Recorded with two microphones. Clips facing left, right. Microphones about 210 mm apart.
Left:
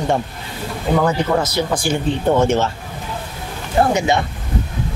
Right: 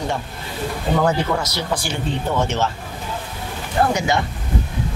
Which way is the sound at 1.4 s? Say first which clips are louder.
Left 5 dB; 50° left (ahead or behind).